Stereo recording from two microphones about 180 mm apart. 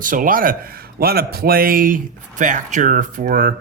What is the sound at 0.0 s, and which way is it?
Speech, 50° right (ahead or behind).